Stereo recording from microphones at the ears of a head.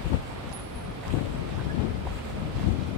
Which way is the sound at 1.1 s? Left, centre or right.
Left.